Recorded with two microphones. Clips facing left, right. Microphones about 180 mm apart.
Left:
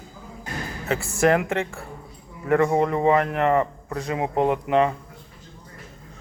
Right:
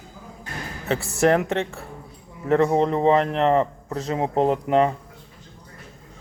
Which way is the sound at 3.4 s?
25° right (ahead or behind).